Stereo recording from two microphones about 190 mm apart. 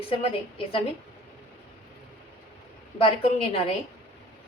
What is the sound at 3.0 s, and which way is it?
Speech, 30° left (ahead or behind).